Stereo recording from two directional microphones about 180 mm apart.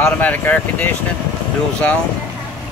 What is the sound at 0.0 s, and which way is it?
Speech, 10° left (ahead or behind).